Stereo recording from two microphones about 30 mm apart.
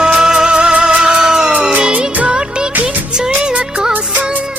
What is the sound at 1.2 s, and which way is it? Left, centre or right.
Music, centre.